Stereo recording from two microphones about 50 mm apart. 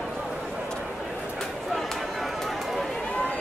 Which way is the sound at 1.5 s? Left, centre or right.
Centre.